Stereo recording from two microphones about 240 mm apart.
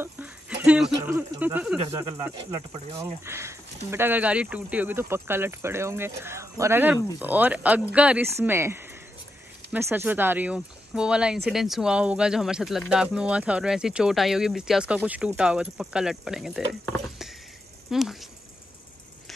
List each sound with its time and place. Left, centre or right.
0.0 s dog: centre
0.9 s speech: centre
1.8 s speech: right
3.3 s speech: centre